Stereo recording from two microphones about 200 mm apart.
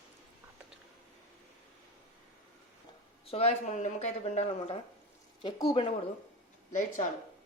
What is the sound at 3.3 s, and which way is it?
Speech, 35° left (ahead or behind).